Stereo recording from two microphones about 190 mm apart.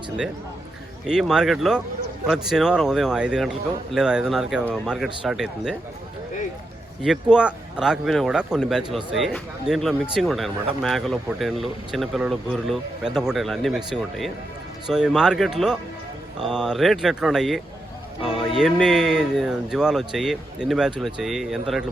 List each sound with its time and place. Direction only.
1.0 s speech: 5° right (ahead or behind)
7.0 s speech: 5° right (ahead or behind)